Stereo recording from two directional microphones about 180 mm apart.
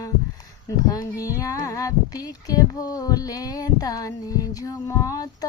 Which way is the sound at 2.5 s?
20° left (ahead or behind).